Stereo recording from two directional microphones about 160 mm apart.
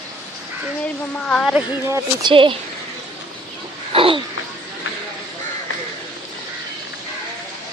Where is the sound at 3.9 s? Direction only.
35° right (ahead or behind).